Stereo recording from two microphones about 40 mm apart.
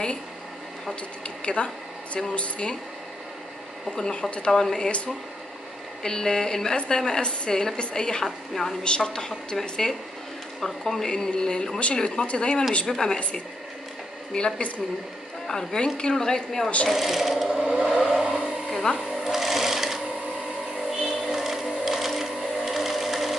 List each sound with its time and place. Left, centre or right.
1.4 s speech: left
3.9 s a woman's voice: centre
6.0 s a woman's voice: centre
8.8 s a woman's voice: left
14.3 s a woman's voice: left
16.9 s speech: centre
17.5 s a sound: right
17.8 s vehicle: centre
19.0 s sewing machine: centre
21.0 s sewing machine: centre